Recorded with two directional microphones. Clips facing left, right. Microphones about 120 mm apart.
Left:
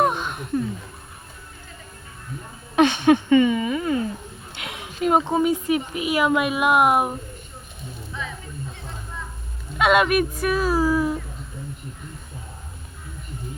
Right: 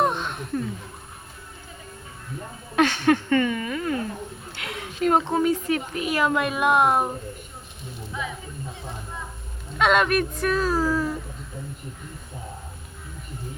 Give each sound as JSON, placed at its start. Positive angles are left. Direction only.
{"t": 0.0, "sound": "a sound", "side_deg": 5}
{"t": 2.7, "sound": "speech", "side_deg": 20}
{"t": 9.7, "sound": "speech", "side_deg": 5}